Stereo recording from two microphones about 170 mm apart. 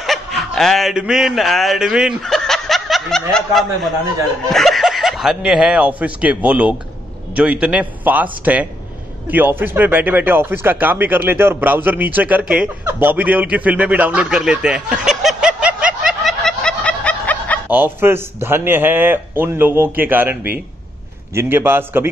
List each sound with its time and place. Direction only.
0.0 s a man's voice: centre (ahead or behind)
17.6 s a man's voice: 10° right (ahead or behind)